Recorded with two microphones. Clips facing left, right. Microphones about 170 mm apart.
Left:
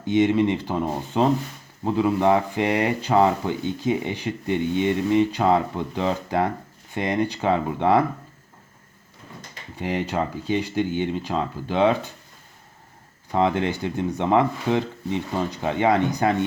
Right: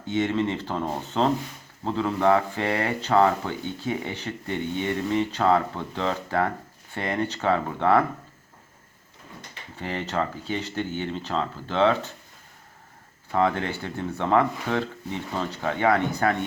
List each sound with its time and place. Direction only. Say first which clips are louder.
0.1 s speech: left 6 dB; 15° left (ahead or behind)
9.7 s speech: left 3 dB; 15° left (ahead or behind)
13.3 s speech: left 2 dB; 20° left (ahead or behind)